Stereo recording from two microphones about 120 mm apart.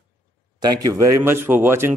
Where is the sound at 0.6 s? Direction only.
35° right (ahead or behind).